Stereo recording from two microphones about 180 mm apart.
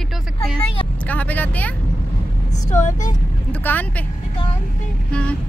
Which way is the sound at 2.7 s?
40° left (ahead or behind).